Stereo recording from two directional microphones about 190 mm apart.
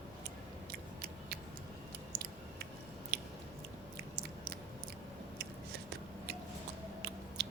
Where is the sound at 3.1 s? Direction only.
55° right (ahead or behind).